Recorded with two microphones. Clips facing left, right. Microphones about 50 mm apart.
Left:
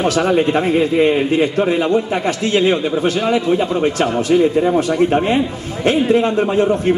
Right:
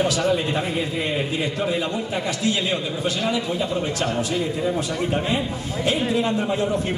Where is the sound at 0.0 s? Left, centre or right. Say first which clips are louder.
Left 6 dB; left.